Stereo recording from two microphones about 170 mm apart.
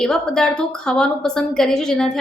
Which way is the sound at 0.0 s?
5° left (ahead or behind).